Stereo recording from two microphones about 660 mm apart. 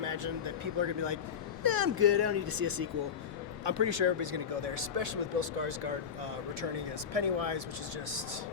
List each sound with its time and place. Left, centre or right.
0.0 s speech: right
7.1 s speech: right